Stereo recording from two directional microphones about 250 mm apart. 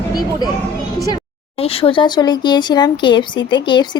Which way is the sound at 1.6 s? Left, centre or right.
Left.